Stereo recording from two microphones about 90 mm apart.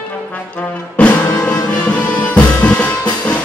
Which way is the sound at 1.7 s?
15° left (ahead or behind).